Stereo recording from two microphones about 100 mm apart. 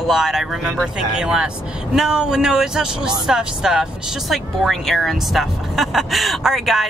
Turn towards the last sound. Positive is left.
turn(degrees=0)  # may be behind; listen again after turning